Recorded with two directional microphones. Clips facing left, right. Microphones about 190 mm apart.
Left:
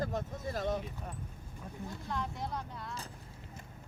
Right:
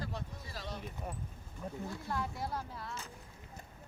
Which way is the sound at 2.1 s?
5° right (ahead or behind).